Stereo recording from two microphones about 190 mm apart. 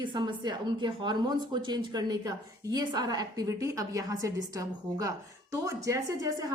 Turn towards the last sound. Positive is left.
turn(degrees=-15)  # may be behind; listen again after turning